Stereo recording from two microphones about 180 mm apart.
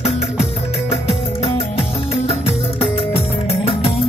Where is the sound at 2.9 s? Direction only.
35° left (ahead or behind).